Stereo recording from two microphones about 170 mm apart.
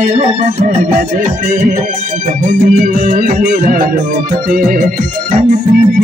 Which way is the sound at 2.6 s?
50° right (ahead or behind).